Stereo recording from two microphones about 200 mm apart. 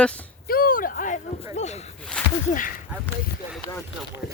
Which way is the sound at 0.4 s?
45° left (ahead or behind).